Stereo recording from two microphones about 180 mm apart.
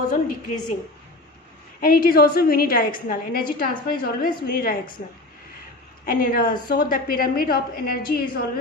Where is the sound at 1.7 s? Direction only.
55° left (ahead or behind).